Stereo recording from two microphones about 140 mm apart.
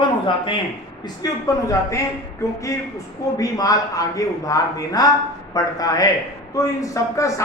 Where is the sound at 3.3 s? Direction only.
25° left (ahead or behind).